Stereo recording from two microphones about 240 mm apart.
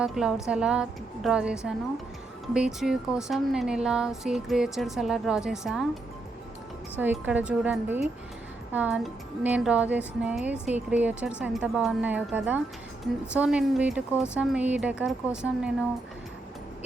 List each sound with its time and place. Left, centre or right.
0.0 s speech: centre
7.0 s speech: centre